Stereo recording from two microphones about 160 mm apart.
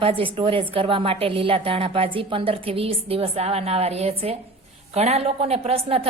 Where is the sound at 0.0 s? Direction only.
35° right (ahead or behind).